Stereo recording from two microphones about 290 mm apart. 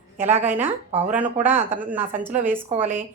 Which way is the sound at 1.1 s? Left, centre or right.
Centre.